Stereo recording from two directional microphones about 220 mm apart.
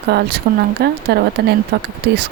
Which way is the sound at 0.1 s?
50° right (ahead or behind).